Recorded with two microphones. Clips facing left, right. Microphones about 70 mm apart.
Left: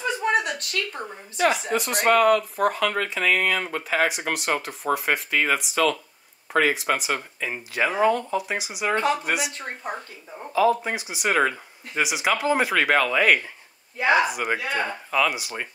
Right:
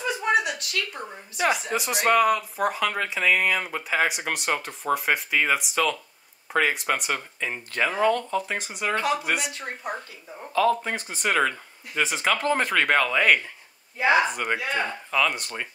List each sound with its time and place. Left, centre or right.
0.4 s a sound: left
1.4 s speech: centre
10.5 s speech: centre